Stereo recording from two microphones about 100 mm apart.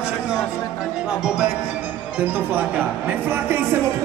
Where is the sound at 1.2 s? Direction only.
5° right (ahead or behind).